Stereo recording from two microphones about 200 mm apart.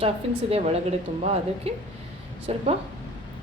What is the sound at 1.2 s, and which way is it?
A woman's voice, 30° right (ahead or behind).